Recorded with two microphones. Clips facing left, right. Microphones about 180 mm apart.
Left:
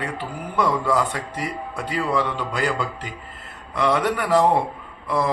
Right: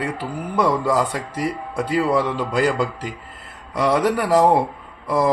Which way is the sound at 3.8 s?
35° right (ahead or behind).